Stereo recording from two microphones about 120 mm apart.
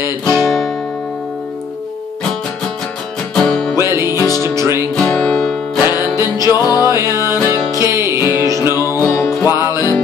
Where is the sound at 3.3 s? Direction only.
5° left (ahead or behind).